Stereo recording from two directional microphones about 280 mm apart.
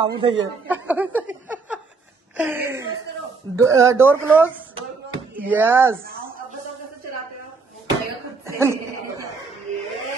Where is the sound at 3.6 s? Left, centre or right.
Centre.